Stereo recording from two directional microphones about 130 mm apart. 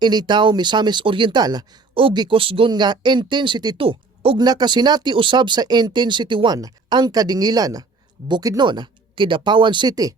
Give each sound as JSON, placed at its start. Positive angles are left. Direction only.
{"t": 0.0, "sound": "speech", "side_deg": -35}
{"t": 3.8, "sound": "speech", "side_deg": -45}
{"t": 4.4, "sound": "speech", "side_deg": -30}